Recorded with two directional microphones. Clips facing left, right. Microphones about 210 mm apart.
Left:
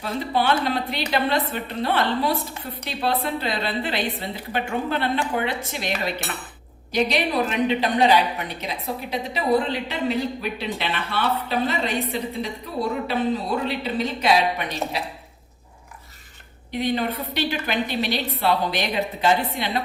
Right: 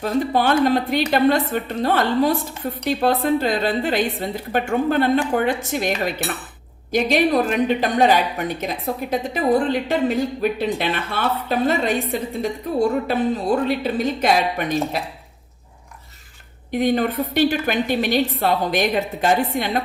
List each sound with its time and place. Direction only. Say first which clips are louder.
0.0 s a woman's voice: right 4 dB; 45° right (ahead or behind)
6.9 s a woman's voice: right 5 dB; 50° right (ahead or behind)
16.7 s a woman's voice: right 5 dB; 50° right (ahead or behind)